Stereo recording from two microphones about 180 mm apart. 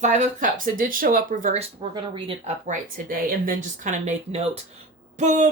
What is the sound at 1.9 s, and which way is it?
Speech, 30° right (ahead or behind).